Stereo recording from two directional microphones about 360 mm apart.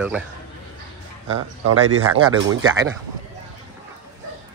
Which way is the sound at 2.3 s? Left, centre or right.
Right.